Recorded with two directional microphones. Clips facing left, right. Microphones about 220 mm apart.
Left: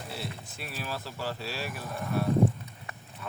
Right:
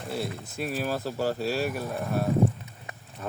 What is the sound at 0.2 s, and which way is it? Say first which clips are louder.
Speech: right 8 dB; 45° right (ahead or behind).